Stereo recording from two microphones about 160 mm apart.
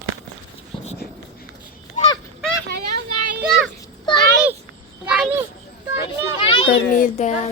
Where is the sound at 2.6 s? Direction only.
70° right (ahead or behind).